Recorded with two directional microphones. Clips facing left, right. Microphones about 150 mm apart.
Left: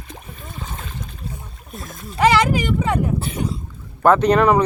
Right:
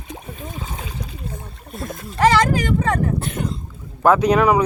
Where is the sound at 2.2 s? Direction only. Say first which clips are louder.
Even; 10° left (ahead or behind).